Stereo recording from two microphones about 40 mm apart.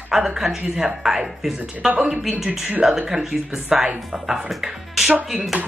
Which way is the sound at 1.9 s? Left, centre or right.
Right.